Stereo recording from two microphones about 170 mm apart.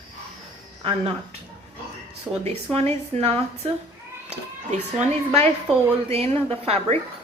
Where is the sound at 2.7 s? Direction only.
40° right (ahead or behind).